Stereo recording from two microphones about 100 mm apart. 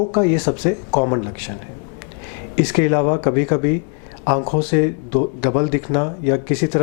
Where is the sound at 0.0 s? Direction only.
15° left (ahead or behind).